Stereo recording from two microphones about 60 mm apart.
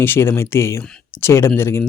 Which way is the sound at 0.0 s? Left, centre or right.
Left.